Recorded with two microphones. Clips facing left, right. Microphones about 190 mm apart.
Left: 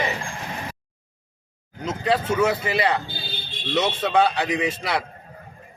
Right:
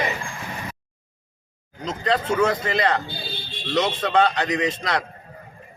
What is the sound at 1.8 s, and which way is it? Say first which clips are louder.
A man's voice: left 1 dB; 10° left (ahead or behind).